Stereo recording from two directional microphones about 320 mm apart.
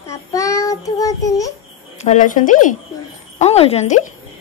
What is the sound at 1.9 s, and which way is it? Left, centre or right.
A woman's voice, left.